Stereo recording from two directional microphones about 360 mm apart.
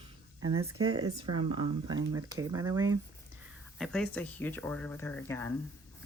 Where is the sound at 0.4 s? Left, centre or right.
Centre.